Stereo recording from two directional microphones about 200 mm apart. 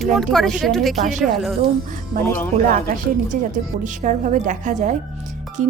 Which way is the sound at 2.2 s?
15° left (ahead or behind).